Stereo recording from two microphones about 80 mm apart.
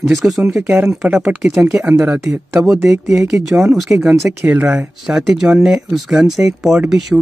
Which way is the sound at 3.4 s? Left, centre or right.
Centre.